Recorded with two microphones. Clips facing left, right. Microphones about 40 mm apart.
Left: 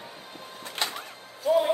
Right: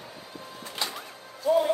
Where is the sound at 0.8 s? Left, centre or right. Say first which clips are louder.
Left 2 dB; left.